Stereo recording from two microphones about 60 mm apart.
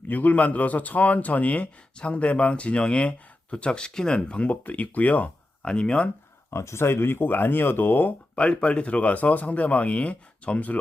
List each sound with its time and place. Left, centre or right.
0.1 s speech: left
5.6 s speech: centre
6.5 s speech: left
8.4 s speech: centre